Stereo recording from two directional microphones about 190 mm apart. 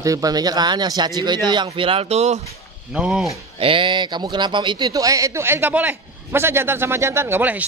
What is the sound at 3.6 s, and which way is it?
A man's voice, 25° right (ahead or behind).